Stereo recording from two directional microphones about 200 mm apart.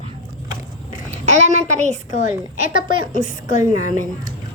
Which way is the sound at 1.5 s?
35° right (ahead or behind).